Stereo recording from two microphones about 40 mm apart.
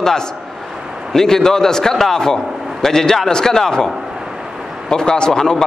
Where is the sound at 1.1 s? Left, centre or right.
Centre.